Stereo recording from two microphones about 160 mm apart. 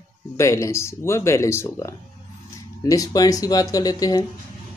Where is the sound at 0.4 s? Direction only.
20° left (ahead or behind).